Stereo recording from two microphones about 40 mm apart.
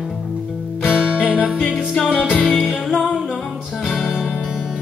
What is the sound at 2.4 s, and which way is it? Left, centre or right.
Music, centre.